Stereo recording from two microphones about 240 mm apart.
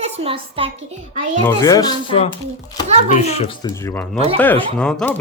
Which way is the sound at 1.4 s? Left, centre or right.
Centre.